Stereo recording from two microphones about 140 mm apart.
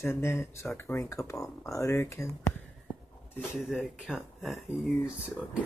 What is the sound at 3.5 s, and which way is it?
Speech, centre (ahead or behind).